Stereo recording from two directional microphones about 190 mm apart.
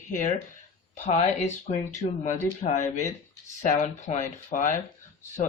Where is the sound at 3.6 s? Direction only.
40° left (ahead or behind).